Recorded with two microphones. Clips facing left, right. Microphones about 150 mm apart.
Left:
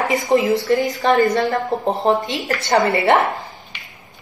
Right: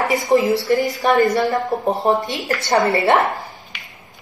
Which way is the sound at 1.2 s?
15° right (ahead or behind).